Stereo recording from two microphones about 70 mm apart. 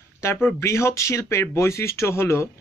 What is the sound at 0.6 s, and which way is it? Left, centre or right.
Speech, left.